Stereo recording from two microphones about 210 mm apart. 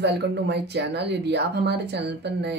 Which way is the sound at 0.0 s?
55° right (ahead or behind).